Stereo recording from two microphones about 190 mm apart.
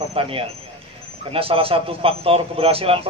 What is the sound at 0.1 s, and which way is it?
A man's voice, 30° right (ahead or behind).